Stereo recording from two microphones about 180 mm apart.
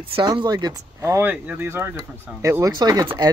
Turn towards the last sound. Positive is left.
turn(degrees=-20)  # may be behind; listen again after turning